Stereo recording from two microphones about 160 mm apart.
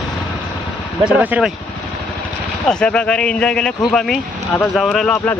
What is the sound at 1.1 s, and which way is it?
Speech, 5° right (ahead or behind).